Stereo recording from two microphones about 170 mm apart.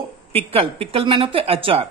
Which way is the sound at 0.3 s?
35° right (ahead or behind).